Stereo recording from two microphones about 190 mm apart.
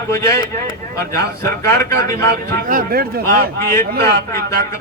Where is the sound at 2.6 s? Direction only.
50° right (ahead or behind).